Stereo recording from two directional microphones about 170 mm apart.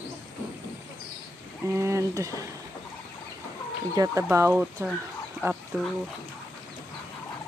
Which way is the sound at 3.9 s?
20° right (ahead or behind).